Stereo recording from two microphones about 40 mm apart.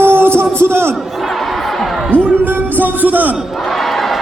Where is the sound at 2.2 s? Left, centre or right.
Right.